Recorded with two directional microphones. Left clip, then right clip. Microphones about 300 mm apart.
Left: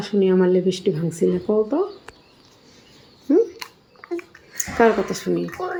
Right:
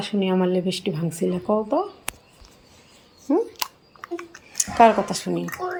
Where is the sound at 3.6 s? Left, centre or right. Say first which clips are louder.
Right 6 dB; right.